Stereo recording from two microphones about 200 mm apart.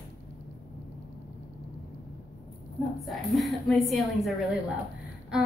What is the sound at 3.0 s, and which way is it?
A woman's voice, centre (ahead or behind).